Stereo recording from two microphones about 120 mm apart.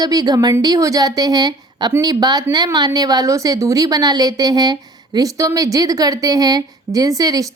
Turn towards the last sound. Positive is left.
turn(degrees=-30)  # may be behind; listen again after turning